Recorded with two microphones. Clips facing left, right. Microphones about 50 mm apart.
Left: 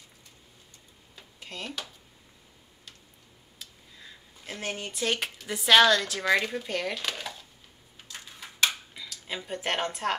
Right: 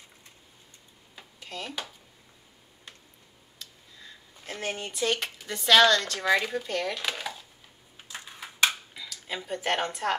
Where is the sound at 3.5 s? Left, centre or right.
Centre.